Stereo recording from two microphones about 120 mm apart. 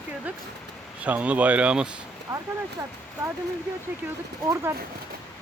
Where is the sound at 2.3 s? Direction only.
35° right (ahead or behind).